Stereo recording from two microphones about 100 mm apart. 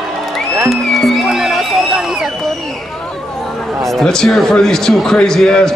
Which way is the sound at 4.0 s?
5° left (ahead or behind).